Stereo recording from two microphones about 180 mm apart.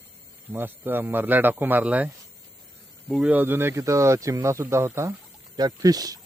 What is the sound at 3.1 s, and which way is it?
Speech, 5° right (ahead or behind).